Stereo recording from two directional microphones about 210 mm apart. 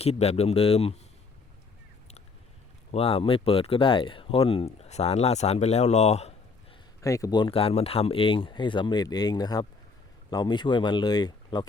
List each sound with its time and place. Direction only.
0.0 s speech: 30° left (ahead or behind)
2.9 s speech: 30° left (ahead or behind)
7.0 s speech: 15° left (ahead or behind)